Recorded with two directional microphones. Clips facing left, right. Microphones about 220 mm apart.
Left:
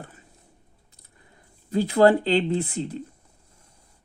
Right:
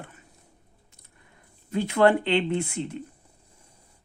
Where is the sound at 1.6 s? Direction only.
35° left (ahead or behind).